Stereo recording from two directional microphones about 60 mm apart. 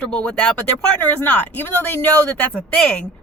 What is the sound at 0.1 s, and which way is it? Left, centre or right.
Speech, centre.